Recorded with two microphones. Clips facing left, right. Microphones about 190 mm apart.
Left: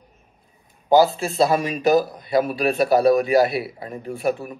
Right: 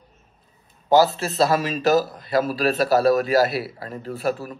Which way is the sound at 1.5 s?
15° left (ahead or behind).